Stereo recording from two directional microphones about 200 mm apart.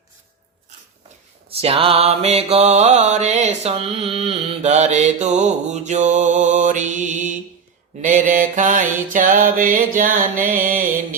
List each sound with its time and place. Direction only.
1.5 s mantra: 30° right (ahead or behind)